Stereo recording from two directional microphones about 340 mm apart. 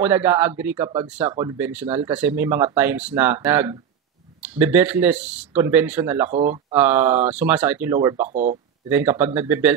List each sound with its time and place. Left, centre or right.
0.0 s speech: centre
8.3 s speech: right
8.8 s speech: centre